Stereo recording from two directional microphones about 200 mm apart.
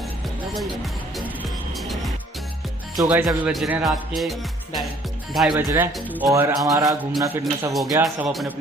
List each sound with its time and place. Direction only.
1.8 s music: centre (ahead or behind)
3.0 s speech: 10° right (ahead or behind)
5.6 s speech: 10° right (ahead or behind)
8.3 s speech: centre (ahead or behind)